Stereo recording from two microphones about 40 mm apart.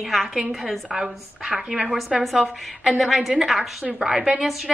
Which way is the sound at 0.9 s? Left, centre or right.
Centre.